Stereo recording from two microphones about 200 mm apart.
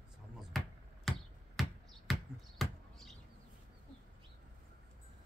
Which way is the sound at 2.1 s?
Centre (ahead or behind).